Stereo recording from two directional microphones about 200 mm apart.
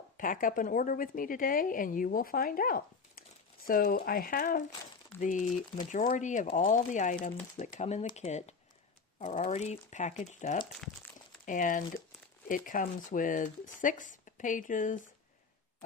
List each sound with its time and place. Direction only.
0.2 s a woman's voice: 45° left (ahead or behind)
10.7 s crumpling: centre (ahead or behind)
11.4 s speech: 40° left (ahead or behind)